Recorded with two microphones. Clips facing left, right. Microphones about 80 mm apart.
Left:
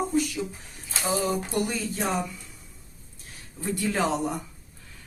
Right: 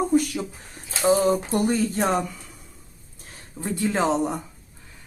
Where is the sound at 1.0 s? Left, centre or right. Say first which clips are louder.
Right 8 dB; right.